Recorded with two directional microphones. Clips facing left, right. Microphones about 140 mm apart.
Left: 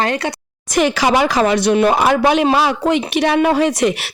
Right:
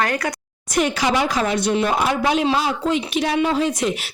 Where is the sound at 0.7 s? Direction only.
90° left.